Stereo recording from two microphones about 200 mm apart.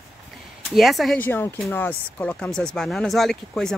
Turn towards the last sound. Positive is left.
turn(degrees=0)  # may be behind; listen again after turning